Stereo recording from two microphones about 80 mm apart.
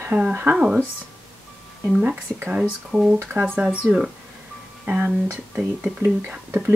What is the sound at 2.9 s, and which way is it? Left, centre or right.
Speech, centre.